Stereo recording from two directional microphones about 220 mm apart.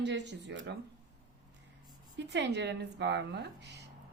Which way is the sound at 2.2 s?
50° right (ahead or behind).